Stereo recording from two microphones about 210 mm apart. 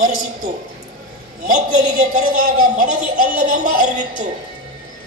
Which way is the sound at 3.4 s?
35° right (ahead or behind).